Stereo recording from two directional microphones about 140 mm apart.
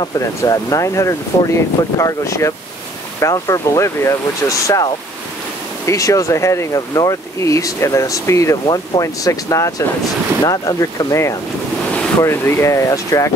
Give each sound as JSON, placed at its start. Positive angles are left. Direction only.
{"t": 0.0, "sound": "speech", "side_deg": 25}